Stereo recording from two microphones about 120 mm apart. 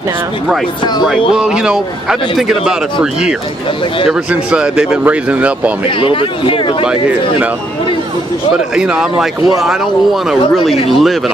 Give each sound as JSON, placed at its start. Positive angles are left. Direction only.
{"t": 1.3, "sound": "speech", "side_deg": -5}
{"t": 5.9, "sound": "speech", "side_deg": 45}
{"t": 8.7, "sound": "speech", "side_deg": -5}
{"t": 10.7, "sound": "speech", "side_deg": 0}